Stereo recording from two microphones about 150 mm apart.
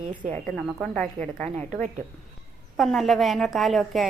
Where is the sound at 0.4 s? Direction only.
5° left (ahead or behind).